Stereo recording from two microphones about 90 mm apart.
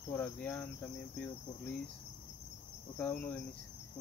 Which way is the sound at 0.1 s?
20° left (ahead or behind).